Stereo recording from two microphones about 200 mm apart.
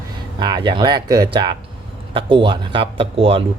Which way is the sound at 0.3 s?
20° right (ahead or behind).